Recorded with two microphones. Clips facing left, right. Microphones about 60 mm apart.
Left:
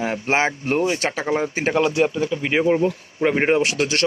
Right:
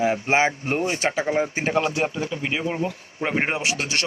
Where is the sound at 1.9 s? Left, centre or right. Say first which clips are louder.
Left 5 dB; left.